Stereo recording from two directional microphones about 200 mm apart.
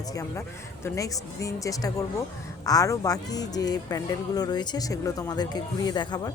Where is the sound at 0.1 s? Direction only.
15° left (ahead or behind).